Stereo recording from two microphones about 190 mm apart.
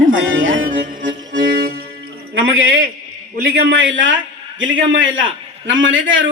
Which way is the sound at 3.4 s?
60° right (ahead or behind).